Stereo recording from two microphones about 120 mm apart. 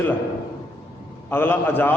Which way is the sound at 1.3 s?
20° left (ahead or behind).